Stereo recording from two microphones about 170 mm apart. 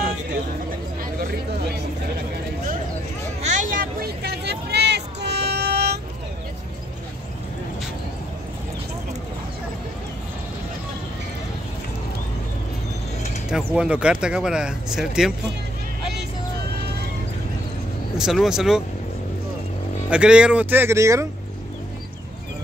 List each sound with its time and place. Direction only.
3.4 s a sound: 50° right (ahead or behind); by 5.9 s 75° right (ahead or behind)
13.7 s speech: 5° right (ahead or behind)
18.1 s speech: centre (ahead or behind)
20.1 s speech: 5° right (ahead or behind)